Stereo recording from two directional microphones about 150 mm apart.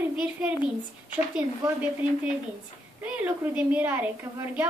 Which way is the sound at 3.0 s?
10° right (ahead or behind).